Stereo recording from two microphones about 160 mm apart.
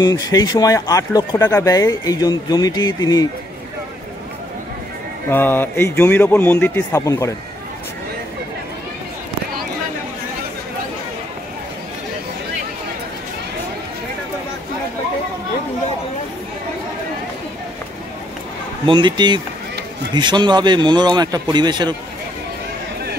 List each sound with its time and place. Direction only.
0.0 s speech: 25° left (ahead or behind)
5.3 s a man's voice: 10° left (ahead or behind)
18.9 s a man's voice: 30° right (ahead or behind)